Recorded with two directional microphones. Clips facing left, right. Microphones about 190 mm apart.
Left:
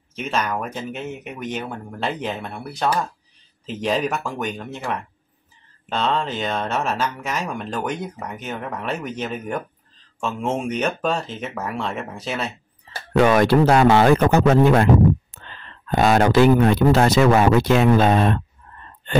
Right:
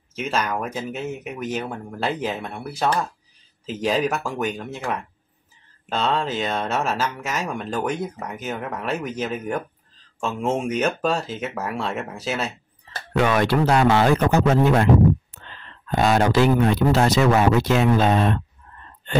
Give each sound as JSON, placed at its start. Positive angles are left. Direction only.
{"t": 0.3, "sound": "speech", "side_deg": -5}
{"t": 13.1, "sound": "speech", "side_deg": 45}
{"t": 15.9, "sound": "speech", "side_deg": 55}